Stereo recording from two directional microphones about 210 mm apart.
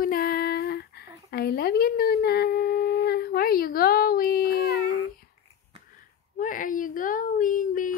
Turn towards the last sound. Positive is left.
turn(degrees=40)  # may be behind; listen again after turning